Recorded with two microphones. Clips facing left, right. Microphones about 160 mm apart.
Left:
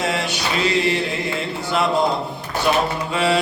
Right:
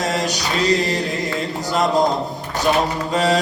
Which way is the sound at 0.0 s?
40° right (ahead or behind).